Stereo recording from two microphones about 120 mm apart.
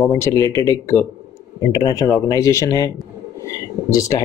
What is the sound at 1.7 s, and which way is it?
Speech, 40° left (ahead or behind).